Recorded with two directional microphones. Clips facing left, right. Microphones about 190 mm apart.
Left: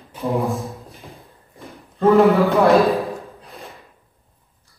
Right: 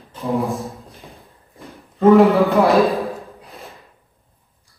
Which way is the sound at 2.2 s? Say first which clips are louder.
Right 1 dB; centre (ahead or behind).